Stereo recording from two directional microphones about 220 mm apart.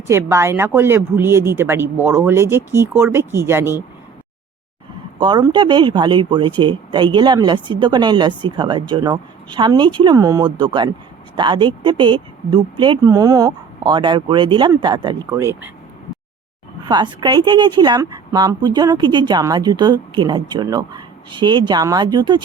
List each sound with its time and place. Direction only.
0.1 s speech: 10° right (ahead or behind)
5.2 s a woman's voice: 20° right (ahead or behind)
16.8 s a woman's voice: 20° right (ahead or behind)